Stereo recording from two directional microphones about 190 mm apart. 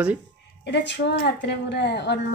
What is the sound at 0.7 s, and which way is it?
Speech, 65° left (ahead or behind).